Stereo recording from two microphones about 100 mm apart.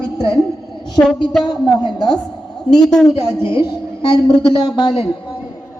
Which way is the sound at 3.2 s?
25° right (ahead or behind).